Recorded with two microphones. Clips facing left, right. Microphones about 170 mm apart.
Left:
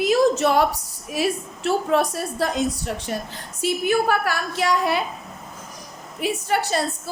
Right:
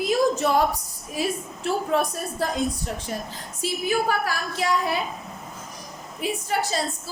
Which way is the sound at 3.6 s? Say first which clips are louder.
Left 4 dB; 65° left (ahead or behind).